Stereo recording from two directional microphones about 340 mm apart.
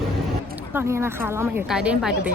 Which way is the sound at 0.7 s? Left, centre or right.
Centre.